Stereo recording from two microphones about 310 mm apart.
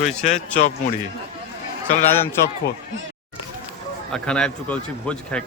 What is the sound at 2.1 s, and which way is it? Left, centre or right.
Speech, centre.